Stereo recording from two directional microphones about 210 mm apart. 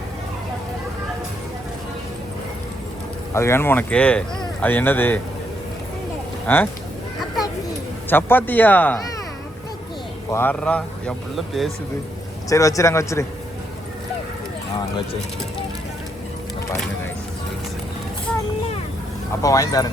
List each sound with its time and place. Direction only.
3.3 s speech: 10° left (ahead or behind)
6.5 s speech: 10° left (ahead or behind)
8.1 s speech: 10° left (ahead or behind)
10.3 s speech: 10° left (ahead or behind)
12.5 s speech: 15° left (ahead or behind)
19.4 s speech: 15° left (ahead or behind)